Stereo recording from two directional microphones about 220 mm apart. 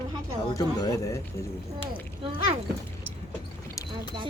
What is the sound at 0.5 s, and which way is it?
Speech, 15° left (ahead or behind).